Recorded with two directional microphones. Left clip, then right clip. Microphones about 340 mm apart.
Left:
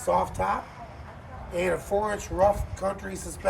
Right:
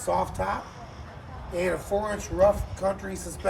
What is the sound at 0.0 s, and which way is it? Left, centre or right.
Speech, centre.